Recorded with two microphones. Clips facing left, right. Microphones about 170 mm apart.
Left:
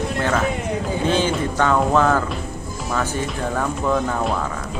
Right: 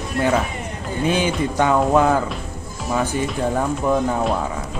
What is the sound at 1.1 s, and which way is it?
Music, 15° right (ahead or behind).